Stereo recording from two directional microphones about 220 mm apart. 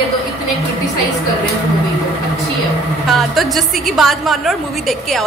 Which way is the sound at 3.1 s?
Centre (ahead or behind).